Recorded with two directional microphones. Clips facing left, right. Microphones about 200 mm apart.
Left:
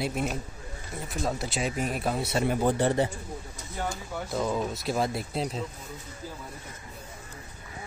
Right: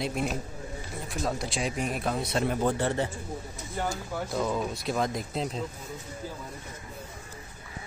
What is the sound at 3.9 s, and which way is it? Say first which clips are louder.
Speech: right 1 dB; centre (ahead or behind).